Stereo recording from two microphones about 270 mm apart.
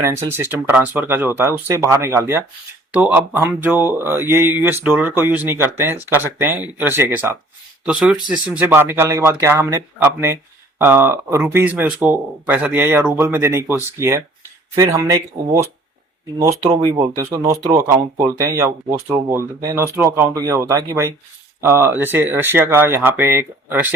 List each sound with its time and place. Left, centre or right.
0.0 s speech: centre